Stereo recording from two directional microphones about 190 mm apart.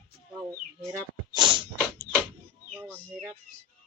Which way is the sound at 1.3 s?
25° right (ahead or behind).